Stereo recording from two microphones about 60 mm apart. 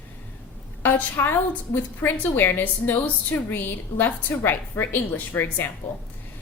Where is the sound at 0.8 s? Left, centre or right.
Left.